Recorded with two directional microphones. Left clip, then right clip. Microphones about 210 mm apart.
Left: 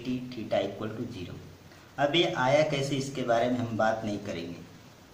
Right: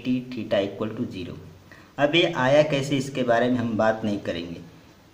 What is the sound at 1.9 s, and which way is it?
A man's voice, 45° right (ahead or behind).